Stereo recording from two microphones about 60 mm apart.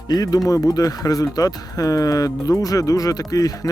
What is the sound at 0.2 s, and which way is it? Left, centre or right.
Speech, left.